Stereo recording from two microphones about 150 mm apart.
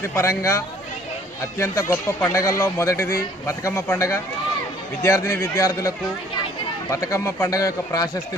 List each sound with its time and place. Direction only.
0.2 s speech: 20° left (ahead or behind)
6.9 s speech: 20° left (ahead or behind)